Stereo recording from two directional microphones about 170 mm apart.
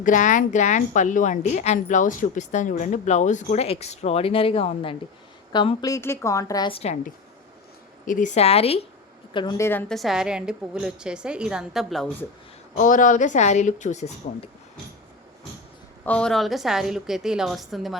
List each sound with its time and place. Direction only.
0.0 s a woman's voice: 50° left (ahead or behind); by 6.7 s 20° left (ahead or behind)
6.7 s speech: 35° left (ahead or behind)
8.0 s a woman's voice: 50° left (ahead or behind); by 9.6 s 30° left (ahead or behind)
9.6 s a woman's voice: 15° left (ahead or behind)
9.9 s a woman's voice: centre (ahead or behind)
12.7 s a woman's voice: 50° left (ahead or behind)
16.0 s a woman's voice: 5° left (ahead or behind)